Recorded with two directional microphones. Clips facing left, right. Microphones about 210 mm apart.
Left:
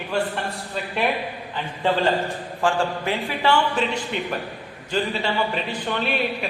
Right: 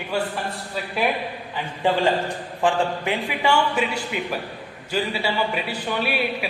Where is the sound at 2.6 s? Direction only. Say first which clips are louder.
Right 1 dB; 15° right (ahead or behind).